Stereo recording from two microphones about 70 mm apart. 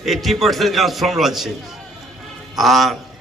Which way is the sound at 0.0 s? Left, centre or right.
Centre.